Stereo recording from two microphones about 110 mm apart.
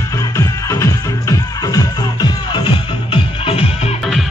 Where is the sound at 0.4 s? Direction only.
25° left (ahead or behind); by 3.9 s 60° left (ahead or behind).